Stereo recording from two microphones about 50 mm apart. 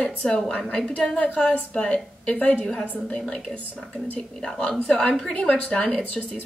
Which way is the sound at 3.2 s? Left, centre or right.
Centre.